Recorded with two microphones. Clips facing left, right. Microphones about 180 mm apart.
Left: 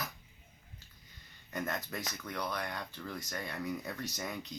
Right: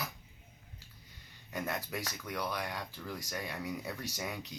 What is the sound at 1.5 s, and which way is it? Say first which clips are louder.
Speech: even; 10° right (ahead or behind).